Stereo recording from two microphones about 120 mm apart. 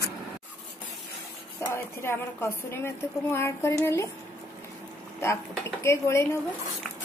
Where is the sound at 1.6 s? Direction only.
20° left (ahead or behind).